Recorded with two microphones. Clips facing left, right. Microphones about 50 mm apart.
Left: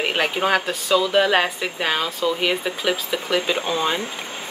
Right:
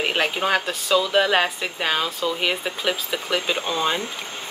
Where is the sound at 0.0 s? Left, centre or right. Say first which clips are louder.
Left 1 dB; centre.